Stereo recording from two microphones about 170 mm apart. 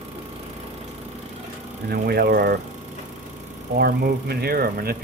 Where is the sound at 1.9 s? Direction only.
65° right (ahead or behind).